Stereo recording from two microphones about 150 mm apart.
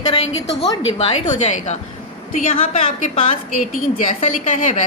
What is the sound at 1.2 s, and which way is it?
Speech, 55° left (ahead or behind).